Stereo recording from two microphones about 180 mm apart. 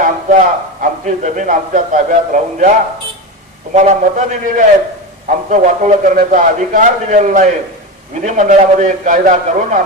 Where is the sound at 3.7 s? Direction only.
40° right (ahead or behind).